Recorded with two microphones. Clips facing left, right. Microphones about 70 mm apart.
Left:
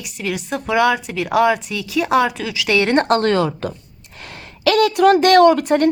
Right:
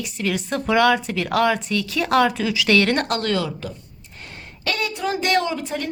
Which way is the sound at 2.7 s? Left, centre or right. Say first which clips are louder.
Left 3 dB; centre.